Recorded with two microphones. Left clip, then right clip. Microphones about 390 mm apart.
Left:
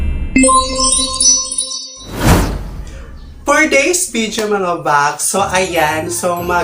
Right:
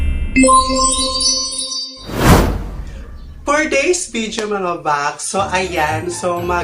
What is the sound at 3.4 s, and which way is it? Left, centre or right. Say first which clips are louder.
Speech: left 4 dB; right.